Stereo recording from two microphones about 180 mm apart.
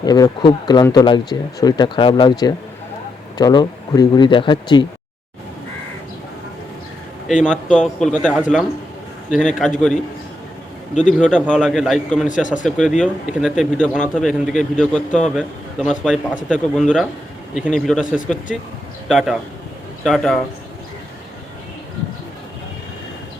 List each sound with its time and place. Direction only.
0.0 s speech: 20° left (ahead or behind)
3.3 s speech: 20° left (ahead or behind)
7.4 s a man's voice: 5° left (ahead or behind)
8.4 s a man's voice: 5° right (ahead or behind)
11.2 s a man's voice: 5° left (ahead or behind)
12.3 s speech: 45° left (ahead or behind)
12.6 s a man's voice: centre (ahead or behind)